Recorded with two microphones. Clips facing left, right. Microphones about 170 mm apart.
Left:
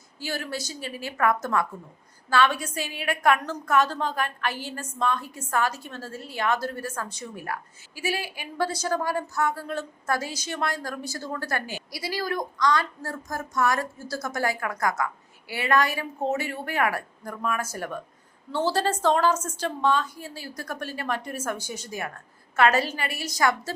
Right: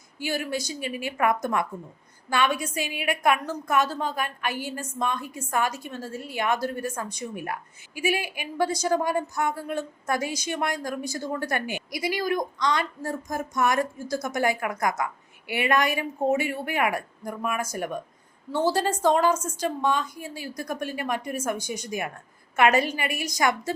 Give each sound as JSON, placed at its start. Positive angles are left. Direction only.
{"t": 0.2, "sound": "a woman's voice", "side_deg": -15}